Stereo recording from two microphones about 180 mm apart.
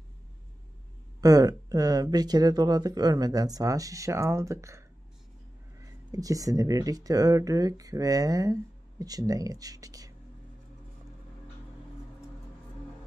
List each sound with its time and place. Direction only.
1.2 s speech: 20° right (ahead or behind)